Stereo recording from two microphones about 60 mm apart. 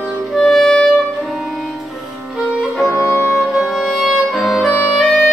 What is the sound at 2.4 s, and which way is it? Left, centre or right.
Music, centre.